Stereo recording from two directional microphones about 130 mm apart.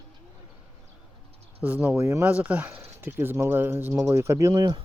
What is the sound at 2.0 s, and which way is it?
Speech, 20° right (ahead or behind).